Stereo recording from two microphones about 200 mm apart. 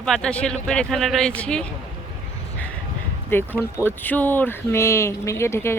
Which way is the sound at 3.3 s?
10° left (ahead or behind).